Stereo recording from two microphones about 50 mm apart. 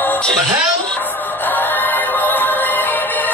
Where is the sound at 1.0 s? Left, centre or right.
Left.